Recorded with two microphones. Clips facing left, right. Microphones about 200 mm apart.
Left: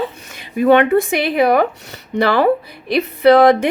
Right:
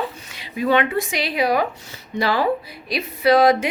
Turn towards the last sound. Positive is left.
turn(degrees=60)  # may be behind; listen again after turning